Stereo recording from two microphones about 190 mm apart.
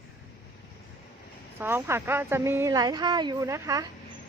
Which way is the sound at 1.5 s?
10° right (ahead or behind).